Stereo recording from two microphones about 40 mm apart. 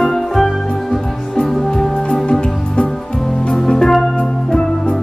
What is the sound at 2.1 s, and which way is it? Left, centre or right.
Music, left.